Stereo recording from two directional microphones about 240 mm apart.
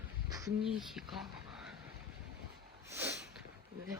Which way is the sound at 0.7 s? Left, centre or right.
Centre.